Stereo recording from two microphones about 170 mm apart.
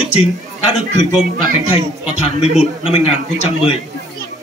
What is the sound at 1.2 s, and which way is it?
Speech, 55° right (ahead or behind).